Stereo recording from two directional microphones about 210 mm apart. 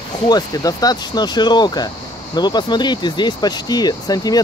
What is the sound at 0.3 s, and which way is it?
Speech, 15° left (ahead or behind).